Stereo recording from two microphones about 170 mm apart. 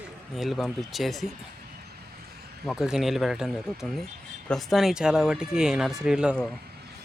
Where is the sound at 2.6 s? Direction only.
5° right (ahead or behind).